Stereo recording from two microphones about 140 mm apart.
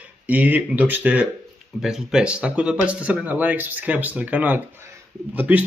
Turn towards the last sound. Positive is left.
turn(degrees=-10)  # may be behind; listen again after turning